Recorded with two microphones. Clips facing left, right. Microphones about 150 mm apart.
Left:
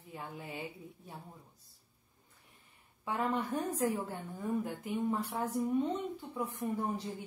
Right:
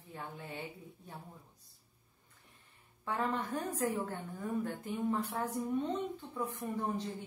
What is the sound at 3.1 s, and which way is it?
A woman's voice, 10° left (ahead or behind).